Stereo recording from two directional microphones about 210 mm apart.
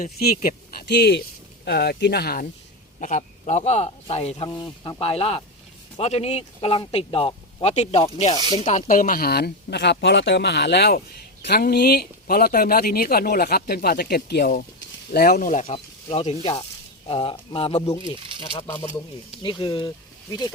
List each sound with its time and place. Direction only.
0.0 s speech: 45° left (ahead or behind)
4.4 s speech: 20° left (ahead or behind)
18.2 s crumpling: 25° right (ahead or behind)
19.4 s speech: 20° left (ahead or behind)